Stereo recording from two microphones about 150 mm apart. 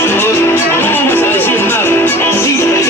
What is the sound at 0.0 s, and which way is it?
Music, 15° left (ahead or behind).